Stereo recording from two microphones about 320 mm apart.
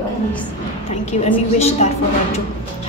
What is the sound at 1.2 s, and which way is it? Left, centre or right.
Speech, centre.